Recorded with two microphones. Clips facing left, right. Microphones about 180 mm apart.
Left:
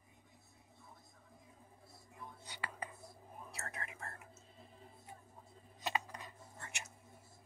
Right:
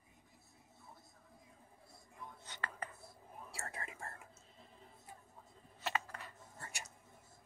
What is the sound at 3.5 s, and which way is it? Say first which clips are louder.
Whispering: right 1 dB; 30° right (ahead or behind).